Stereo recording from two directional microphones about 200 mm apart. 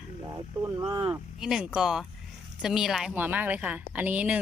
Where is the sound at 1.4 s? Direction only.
5° right (ahead or behind).